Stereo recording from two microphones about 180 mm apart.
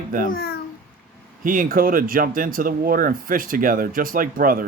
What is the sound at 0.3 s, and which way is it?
Speech, 55° left (ahead or behind).